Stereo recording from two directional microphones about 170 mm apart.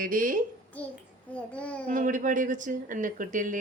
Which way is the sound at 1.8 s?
50° right (ahead or behind).